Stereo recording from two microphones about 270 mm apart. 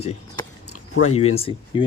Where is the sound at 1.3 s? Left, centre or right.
Left.